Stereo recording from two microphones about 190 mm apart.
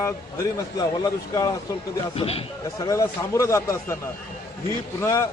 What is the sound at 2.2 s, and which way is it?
Speech, 30° left (ahead or behind).